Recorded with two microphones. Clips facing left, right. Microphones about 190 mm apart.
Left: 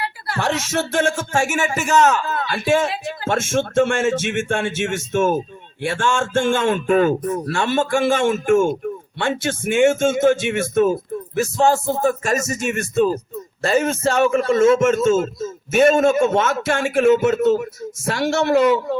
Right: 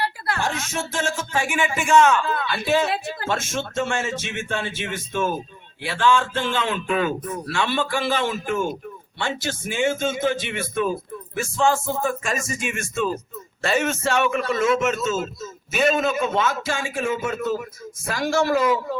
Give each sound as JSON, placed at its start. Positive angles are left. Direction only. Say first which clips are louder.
{"t": 0.3, "sound": "a man's voice", "louder": "left 10 dB", "side_deg": 80}